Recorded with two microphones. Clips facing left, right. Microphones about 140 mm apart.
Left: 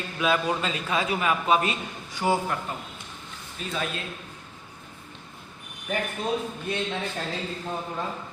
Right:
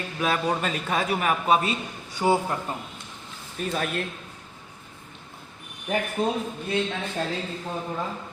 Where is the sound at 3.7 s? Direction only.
50° right (ahead or behind).